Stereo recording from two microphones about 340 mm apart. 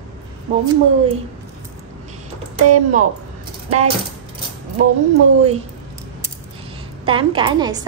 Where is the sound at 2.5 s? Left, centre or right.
Right.